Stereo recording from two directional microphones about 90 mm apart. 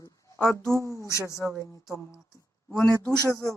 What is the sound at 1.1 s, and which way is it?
Speech, 35° left (ahead or behind).